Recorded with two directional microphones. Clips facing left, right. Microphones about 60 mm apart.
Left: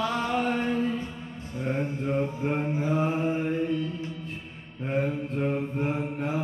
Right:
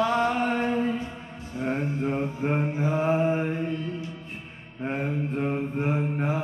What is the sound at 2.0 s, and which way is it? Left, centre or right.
Mantra, right.